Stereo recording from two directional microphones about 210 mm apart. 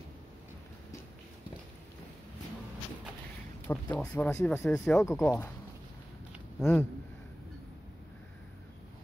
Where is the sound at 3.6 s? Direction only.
5° left (ahead or behind).